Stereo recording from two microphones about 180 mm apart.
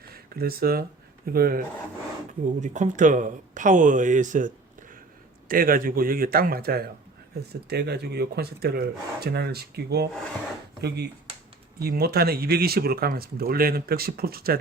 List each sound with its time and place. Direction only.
0.1 s speech: 55° right (ahead or behind)
2.6 s a man's voice: 40° right (ahead or behind); by 14.6 s 55° right (ahead or behind)